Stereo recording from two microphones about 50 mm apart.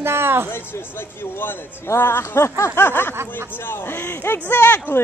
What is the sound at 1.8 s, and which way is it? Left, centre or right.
Speech, left.